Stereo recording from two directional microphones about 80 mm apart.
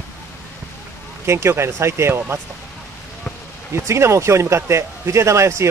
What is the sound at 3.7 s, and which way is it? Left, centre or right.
Speech, right.